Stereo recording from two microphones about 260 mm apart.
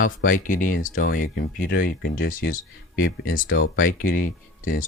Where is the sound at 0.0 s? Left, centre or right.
Left.